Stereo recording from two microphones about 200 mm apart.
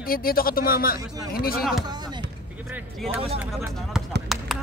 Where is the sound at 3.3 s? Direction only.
5° right (ahead or behind).